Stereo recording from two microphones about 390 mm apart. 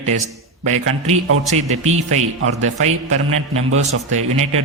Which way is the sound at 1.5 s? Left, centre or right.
Centre.